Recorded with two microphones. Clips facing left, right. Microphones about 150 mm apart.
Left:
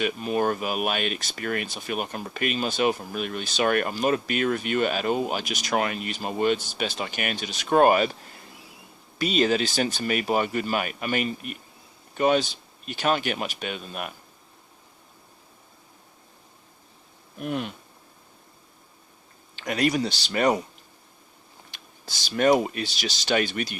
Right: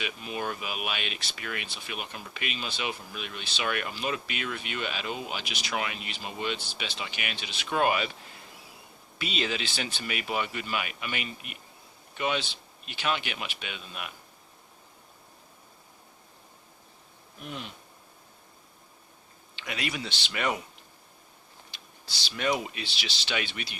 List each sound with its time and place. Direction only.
0.0 s speech: 45° left (ahead or behind)
9.1 s speech: 45° left (ahead or behind)
17.4 s speech: 55° left (ahead or behind)
19.5 s speech: 45° left (ahead or behind)
21.7 s speech: 45° left (ahead or behind)